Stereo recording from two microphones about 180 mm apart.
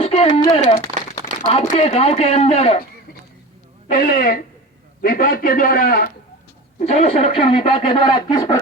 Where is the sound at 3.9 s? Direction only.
50° left (ahead or behind).